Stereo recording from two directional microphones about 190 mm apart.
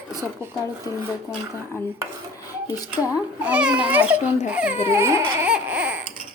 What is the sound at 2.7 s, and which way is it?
Speech, 20° left (ahead or behind).